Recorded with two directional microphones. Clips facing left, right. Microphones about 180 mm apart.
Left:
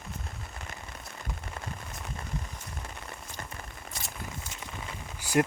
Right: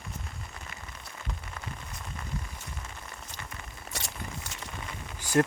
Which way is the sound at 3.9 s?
75° right (ahead or behind).